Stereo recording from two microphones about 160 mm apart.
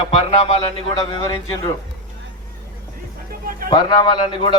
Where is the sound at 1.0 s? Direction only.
20° left (ahead or behind).